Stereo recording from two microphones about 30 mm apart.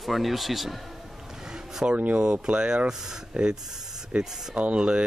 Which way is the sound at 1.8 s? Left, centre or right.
Right.